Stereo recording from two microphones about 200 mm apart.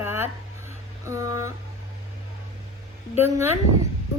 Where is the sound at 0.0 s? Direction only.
10° right (ahead or behind).